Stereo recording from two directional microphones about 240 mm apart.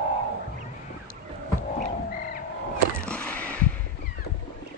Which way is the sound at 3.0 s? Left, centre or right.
Centre.